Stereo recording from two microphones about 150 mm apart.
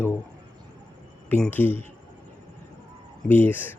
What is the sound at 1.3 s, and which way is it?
Speech, 10° left (ahead or behind).